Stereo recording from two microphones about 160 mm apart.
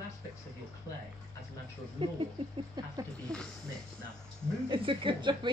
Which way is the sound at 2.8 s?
25° right (ahead or behind).